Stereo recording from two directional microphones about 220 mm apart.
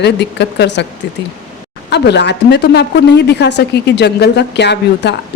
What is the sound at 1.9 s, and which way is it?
A woman's voice, 50° left (ahead or behind).